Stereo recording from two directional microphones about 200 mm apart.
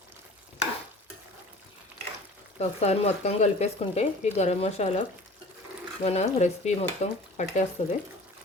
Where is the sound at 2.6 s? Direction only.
30° left (ahead or behind).